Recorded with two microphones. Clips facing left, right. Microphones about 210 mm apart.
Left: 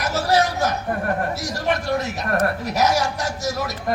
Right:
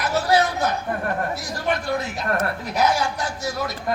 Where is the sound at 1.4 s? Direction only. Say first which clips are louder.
Left 2 dB; 45° left (ahead or behind).